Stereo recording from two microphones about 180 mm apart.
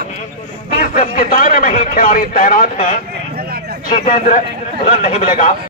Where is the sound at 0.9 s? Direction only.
50° left (ahead or behind).